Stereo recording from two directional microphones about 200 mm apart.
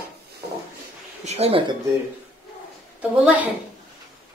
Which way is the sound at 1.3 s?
30° right (ahead or behind).